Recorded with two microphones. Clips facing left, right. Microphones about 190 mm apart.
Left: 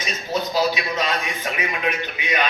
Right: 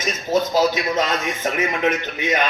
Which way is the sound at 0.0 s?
45° right (ahead or behind).